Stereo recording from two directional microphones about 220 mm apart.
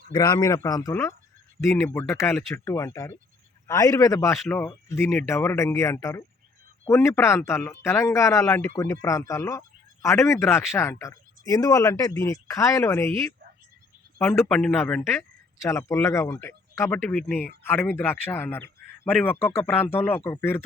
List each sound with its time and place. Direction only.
0.1 s speech: 20° left (ahead or behind)